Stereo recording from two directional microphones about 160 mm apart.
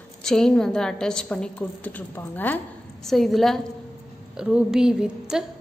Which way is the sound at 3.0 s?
Centre (ahead or behind).